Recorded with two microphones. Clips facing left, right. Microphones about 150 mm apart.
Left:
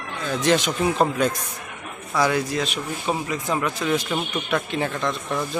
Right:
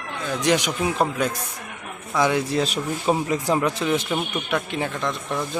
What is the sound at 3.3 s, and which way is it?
Speech, 35° right (ahead or behind).